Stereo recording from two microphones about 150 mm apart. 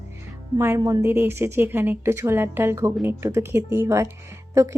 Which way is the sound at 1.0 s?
15° right (ahead or behind).